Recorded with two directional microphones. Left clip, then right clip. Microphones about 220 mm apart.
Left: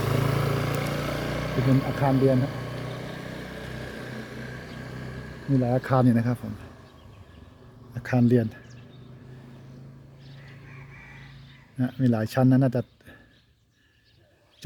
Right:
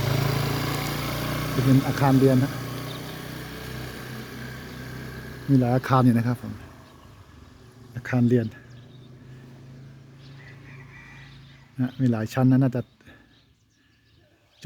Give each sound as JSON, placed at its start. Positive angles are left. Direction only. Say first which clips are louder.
{"t": 0.0, "sound": "vehicle", "louder": "even", "side_deg": -40}
{"t": 5.5, "sound": "speech", "louder": "right 2 dB", "side_deg": -20}
{"t": 7.9, "sound": "speech", "louder": "even", "side_deg": 0}
{"t": 11.9, "sound": "speech", "louder": "left 2 dB", "side_deg": 0}